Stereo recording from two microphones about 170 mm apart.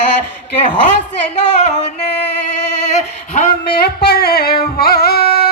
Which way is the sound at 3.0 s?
40° left (ahead or behind).